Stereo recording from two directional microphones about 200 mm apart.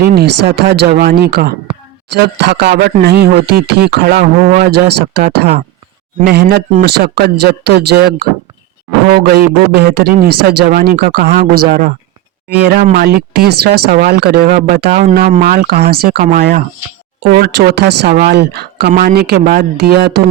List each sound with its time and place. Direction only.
0.0 s speech: 50° right (ahead or behind)
12.5 s speech: 55° right (ahead or behind)
14.8 s speech: 35° right (ahead or behind); by 20.2 s 50° right (ahead or behind)